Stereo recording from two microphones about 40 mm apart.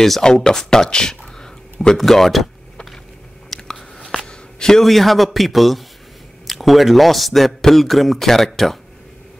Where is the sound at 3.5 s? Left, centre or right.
Centre.